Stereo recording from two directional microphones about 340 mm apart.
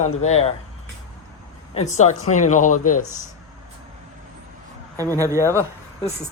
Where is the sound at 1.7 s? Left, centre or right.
Centre.